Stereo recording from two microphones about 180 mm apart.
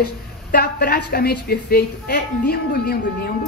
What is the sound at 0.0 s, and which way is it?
A woman's voice, 60° left (ahead or behind).